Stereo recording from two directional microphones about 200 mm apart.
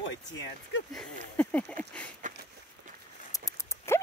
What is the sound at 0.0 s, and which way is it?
Speech, 65° left (ahead or behind).